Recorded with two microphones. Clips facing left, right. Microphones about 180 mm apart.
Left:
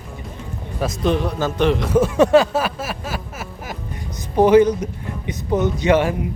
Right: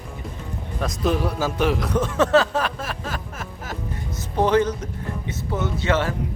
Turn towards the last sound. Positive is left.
turn(degrees=15)  # may be behind; listen again after turning